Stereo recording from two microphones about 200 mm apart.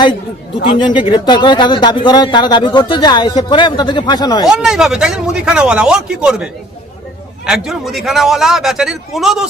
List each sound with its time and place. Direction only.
0.8 s speech: 25° left (ahead or behind)
4.4 s speech: centre (ahead or behind)